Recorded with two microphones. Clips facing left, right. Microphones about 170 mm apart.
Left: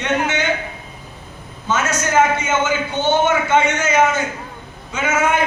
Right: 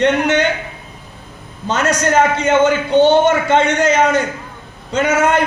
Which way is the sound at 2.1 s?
60° right (ahead or behind).